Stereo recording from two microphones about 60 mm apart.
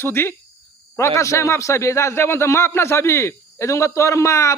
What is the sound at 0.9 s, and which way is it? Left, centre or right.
A man's voice, left.